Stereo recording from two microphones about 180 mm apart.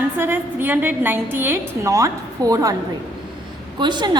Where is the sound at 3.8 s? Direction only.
25° right (ahead or behind).